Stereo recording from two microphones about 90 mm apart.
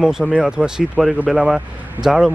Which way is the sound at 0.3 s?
10° right (ahead or behind).